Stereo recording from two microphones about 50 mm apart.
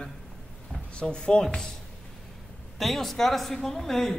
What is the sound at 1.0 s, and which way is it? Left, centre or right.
Speech, centre.